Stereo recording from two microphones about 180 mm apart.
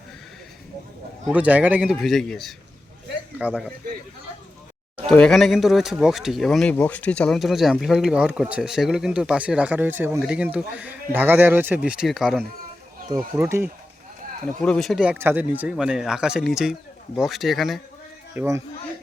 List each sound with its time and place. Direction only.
1.3 s a man's voice: 5° right (ahead or behind)
5.0 s speech: 5° left (ahead or behind)
13.1 s speech: 20° right (ahead or behind)
14.4 s speech: 5° left (ahead or behind)
18.3 s speech: 15° right (ahead or behind)